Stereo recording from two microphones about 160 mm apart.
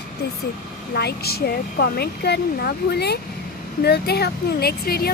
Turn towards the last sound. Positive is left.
turn(degrees=75)  # may be behind; listen again after turning